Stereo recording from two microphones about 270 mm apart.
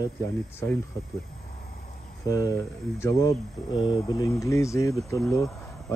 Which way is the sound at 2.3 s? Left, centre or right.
Centre.